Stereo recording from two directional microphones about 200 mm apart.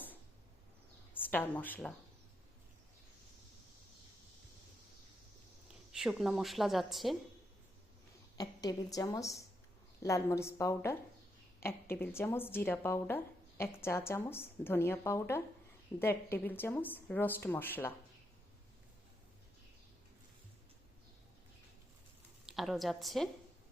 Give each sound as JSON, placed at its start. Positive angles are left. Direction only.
{"t": 1.1, "sound": "speech", "side_deg": 10}
{"t": 5.9, "sound": "speech", "side_deg": 0}
{"t": 8.4, "sound": "a woman's voice", "side_deg": 20}
{"t": 22.4, "sound": "a woman's voice", "side_deg": 0}